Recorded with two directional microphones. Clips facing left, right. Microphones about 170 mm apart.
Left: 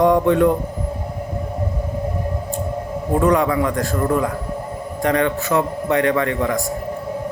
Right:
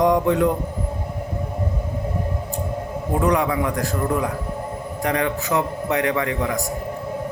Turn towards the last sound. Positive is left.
turn(degrees=-10)  # may be behind; listen again after turning